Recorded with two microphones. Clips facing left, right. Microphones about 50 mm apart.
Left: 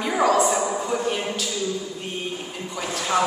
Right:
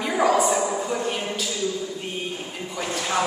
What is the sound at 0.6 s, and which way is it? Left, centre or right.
Speech, centre.